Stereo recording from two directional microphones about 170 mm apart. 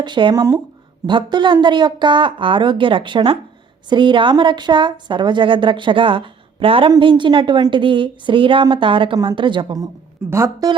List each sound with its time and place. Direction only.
0.0 s a woman's voice: 25° right (ahead or behind)